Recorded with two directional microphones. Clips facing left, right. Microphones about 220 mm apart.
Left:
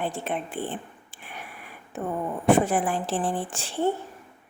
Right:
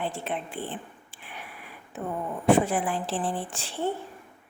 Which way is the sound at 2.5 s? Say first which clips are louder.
Left 1 dB; 45° left (ahead or behind).